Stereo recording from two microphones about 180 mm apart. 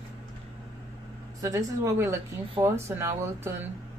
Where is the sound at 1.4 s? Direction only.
15° right (ahead or behind).